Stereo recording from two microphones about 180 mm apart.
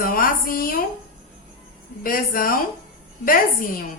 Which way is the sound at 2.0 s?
50° left (ahead or behind).